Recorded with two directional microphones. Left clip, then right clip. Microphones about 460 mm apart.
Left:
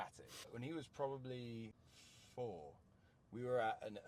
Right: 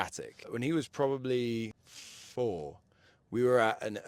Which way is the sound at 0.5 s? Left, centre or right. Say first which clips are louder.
Right 17 dB; right.